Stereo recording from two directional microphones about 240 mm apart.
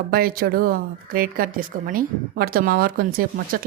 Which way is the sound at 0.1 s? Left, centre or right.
Right.